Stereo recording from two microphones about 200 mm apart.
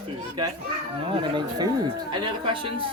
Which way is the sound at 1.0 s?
25° right (ahead or behind).